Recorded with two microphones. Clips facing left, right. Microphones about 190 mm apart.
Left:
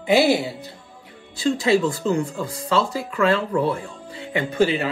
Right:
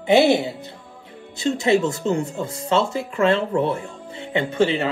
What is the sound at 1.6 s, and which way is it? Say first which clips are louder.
Speech: right 2 dB; 20° right (ahead or behind).